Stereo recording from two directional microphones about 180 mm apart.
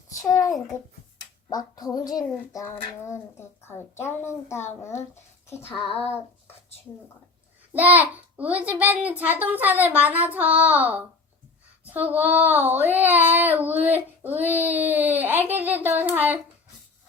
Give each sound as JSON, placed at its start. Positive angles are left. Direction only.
{"t": 0.2, "sound": "a sound", "side_deg": 20}
{"t": 1.5, "sound": "a child's voice", "side_deg": 20}
{"t": 5.9, "sound": "speech", "side_deg": 35}
{"t": 8.1, "sound": "child singing", "side_deg": -10}